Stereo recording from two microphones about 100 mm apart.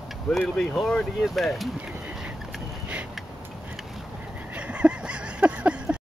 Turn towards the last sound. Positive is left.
turn(degrees=-10)  # may be behind; listen again after turning